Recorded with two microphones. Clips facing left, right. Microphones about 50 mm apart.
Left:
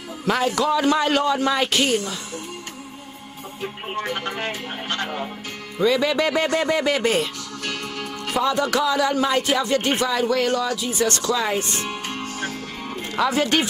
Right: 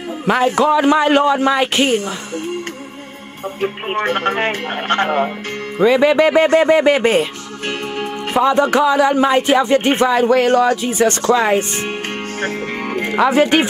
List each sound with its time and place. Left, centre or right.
0.2 s speech: right
3.6 s speech: right
5.8 s speech: right
10.9 s speech: right
12.4 s music: right
13.1 s speech: right